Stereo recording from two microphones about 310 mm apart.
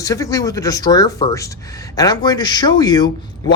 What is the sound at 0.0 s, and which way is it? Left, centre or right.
A man's voice, centre.